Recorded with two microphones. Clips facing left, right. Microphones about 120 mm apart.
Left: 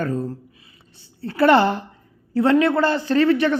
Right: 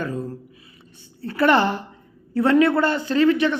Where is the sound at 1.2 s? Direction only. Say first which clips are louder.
Left 3 dB; 30° left (ahead or behind).